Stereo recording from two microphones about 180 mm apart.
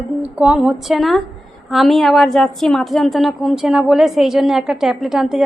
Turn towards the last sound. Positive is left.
turn(degrees=0)  # may be behind; listen again after turning